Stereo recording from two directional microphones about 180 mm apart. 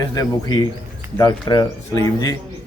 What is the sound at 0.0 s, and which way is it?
Speech, 20° left (ahead or behind).